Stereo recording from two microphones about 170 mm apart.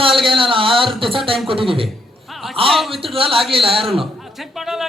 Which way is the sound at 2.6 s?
Centre (ahead or behind).